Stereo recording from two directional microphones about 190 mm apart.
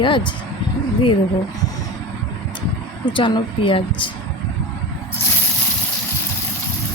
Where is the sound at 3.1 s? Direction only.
25° left (ahead or behind).